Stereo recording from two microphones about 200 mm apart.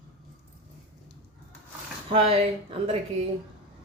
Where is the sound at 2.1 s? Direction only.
30° right (ahead or behind).